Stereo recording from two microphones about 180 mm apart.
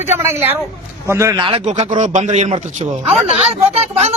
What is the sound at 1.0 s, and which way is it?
Speech, 15° right (ahead or behind).